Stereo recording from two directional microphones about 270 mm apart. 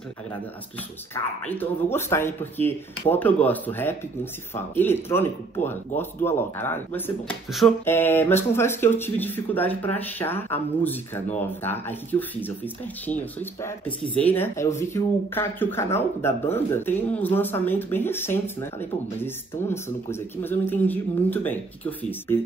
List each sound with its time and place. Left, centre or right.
1.1 s speech: centre